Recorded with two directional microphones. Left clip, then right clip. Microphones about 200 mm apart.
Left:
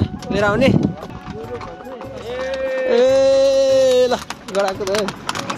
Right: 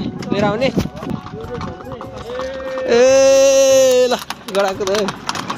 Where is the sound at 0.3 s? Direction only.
20° left (ahead or behind).